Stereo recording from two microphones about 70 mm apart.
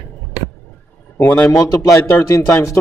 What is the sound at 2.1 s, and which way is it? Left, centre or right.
Speech, left.